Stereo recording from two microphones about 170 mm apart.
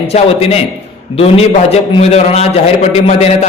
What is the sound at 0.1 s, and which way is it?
A man's voice, 35° left (ahead or behind).